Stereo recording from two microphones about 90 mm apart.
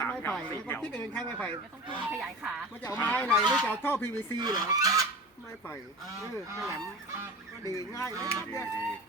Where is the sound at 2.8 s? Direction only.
25° left (ahead or behind).